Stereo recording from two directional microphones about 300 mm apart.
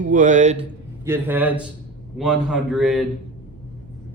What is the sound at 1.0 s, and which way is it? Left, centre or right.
A man's voice, centre.